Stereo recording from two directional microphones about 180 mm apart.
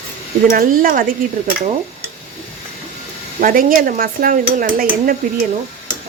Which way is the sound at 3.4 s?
50° right (ahead or behind).